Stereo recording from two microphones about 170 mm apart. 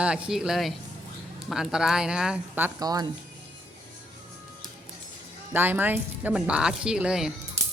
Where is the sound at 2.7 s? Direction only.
20° right (ahead or behind).